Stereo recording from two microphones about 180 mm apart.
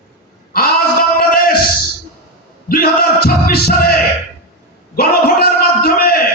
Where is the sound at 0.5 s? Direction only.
55° left (ahead or behind).